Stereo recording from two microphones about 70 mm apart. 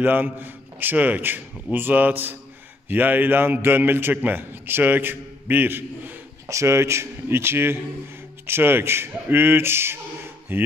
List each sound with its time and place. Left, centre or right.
0.0 s a man's voice: right
6.5 s a man's voice: right